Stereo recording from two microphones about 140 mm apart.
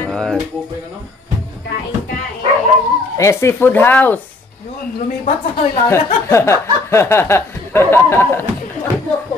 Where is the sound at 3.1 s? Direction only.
20° left (ahead or behind).